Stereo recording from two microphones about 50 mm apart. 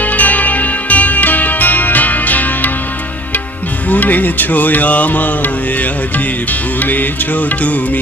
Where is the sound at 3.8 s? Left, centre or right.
Left.